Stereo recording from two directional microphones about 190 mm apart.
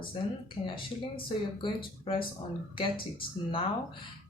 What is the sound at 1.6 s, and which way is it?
Speech, 25° left (ahead or behind).